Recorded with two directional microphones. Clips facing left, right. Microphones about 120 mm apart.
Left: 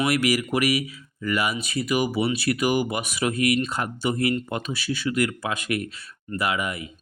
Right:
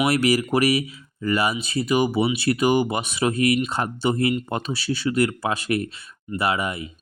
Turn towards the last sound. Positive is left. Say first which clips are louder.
# right 2 dB
turn(degrees=-30)  # may be behind; listen again after turning